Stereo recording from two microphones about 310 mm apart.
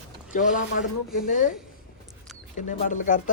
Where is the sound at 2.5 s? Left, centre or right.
Left.